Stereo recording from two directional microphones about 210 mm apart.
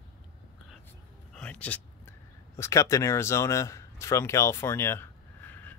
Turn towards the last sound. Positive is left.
turn(degrees=10)  # may be behind; listen again after turning